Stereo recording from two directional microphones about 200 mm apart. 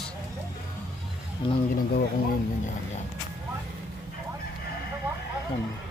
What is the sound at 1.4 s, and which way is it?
Speech, 25° left (ahead or behind).